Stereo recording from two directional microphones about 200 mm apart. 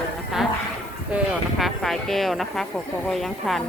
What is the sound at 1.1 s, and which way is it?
A woman's voice, centre (ahead or behind).